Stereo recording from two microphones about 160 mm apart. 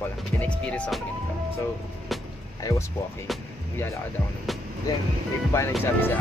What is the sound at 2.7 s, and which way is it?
Speech, 20° left (ahead or behind).